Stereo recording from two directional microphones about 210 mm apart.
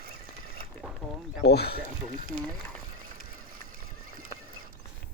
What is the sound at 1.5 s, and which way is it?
Speech, 50° left (ahead or behind).